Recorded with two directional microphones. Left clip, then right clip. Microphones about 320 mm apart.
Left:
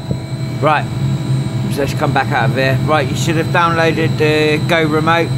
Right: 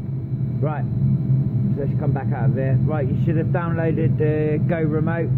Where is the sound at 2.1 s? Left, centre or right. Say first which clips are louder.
Left 15 dB; centre.